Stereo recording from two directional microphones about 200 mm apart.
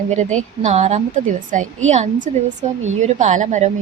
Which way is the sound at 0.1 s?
35° right (ahead or behind).